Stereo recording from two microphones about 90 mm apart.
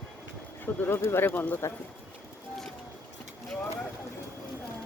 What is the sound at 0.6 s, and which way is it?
Speech, 25° left (ahead or behind).